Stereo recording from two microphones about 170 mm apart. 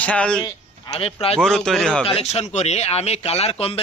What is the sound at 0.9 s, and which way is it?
Speech, 35° left (ahead or behind).